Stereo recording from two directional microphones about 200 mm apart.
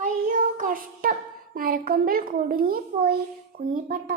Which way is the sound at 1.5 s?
45° right (ahead or behind).